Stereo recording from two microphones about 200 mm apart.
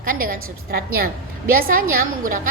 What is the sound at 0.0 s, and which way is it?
A woman's voice, 45° right (ahead or behind).